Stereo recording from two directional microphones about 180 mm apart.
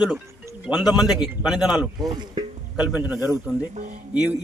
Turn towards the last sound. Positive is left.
turn(degrees=-10)  # may be behind; listen again after turning